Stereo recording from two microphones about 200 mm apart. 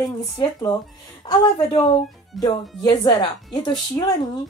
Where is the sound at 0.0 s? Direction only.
20° left (ahead or behind).